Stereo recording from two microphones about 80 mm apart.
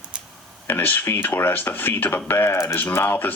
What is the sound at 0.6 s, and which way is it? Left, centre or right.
Speech, left.